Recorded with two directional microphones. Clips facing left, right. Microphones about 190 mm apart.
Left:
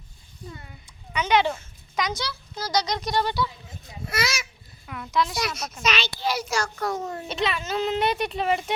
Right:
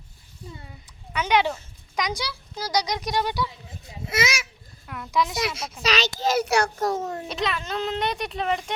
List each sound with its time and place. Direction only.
1.1 s speech: 10° right (ahead or behind); by 5.7 s 30° right (ahead or behind)
5.8 s a child's voice: 40° right (ahead or behind)
6.4 s a child's voice: 65° right (ahead or behind)
7.1 s a child's voice: centre (ahead or behind)